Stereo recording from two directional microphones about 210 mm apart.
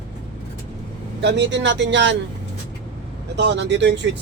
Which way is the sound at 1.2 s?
55° right (ahead or behind).